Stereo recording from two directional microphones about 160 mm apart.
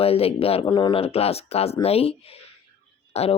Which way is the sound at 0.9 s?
40° left (ahead or behind).